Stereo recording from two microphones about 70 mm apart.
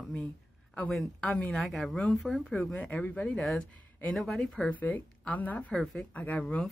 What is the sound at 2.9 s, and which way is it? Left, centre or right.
Speech, left.